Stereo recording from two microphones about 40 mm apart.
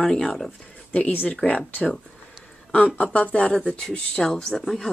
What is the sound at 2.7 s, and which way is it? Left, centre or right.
Speech, left.